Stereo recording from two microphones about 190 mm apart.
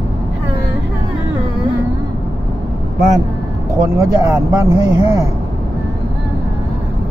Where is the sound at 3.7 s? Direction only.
20° right (ahead or behind).